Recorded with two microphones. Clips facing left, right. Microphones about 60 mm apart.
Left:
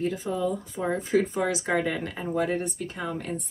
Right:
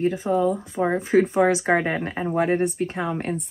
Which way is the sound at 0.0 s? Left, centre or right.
Right.